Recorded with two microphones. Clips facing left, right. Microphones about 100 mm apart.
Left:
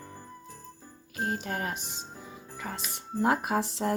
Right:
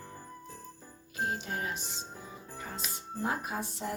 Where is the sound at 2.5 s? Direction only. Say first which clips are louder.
Left 5 dB; 80° left.